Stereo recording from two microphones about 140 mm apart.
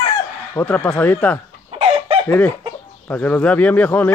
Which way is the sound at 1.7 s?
45° right (ahead or behind).